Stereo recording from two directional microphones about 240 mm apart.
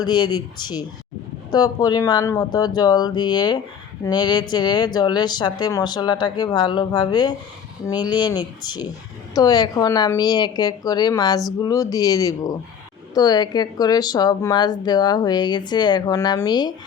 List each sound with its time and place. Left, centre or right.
0.0 s speech: centre